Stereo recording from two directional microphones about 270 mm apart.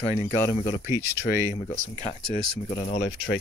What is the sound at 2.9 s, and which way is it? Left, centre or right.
Speech, left.